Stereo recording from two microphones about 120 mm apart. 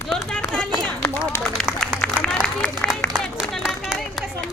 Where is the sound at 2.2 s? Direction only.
5° left (ahead or behind).